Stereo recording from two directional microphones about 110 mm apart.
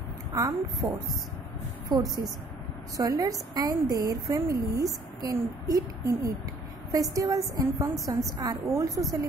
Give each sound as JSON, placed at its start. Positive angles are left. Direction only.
{"t": 0.3, "sound": "a woman's voice", "side_deg": -30}
{"t": 1.9, "sound": "a woman's voice", "side_deg": -35}